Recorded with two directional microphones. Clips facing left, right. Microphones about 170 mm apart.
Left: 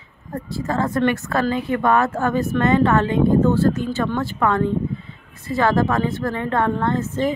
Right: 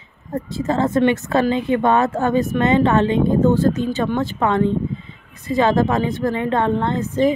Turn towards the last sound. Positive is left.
turn(degrees=-15)  # may be behind; listen again after turning